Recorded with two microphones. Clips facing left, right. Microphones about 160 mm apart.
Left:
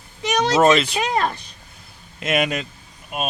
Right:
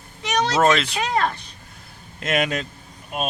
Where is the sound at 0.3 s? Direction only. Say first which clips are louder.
Left 3 dB; 15° left (ahead or behind).